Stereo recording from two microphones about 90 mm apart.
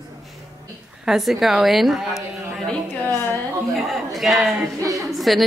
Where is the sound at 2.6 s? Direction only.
20° left (ahead or behind).